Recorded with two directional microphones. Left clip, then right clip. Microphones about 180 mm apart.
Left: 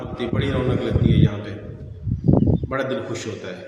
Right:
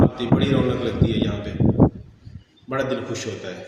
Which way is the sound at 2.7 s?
15° left (ahead or behind).